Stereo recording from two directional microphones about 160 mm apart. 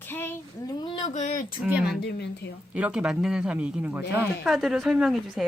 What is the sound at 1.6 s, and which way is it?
A woman's voice, 5° right (ahead or behind).